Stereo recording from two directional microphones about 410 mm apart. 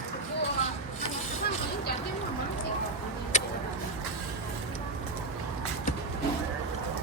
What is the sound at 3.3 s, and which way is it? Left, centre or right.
Vehicle, centre.